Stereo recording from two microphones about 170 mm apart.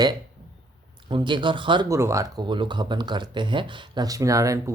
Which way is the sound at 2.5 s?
30° right (ahead or behind).